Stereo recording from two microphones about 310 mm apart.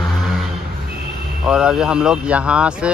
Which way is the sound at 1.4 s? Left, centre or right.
Centre.